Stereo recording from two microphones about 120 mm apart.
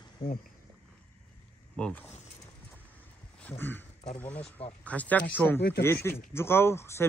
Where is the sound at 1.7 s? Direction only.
5° left (ahead or behind).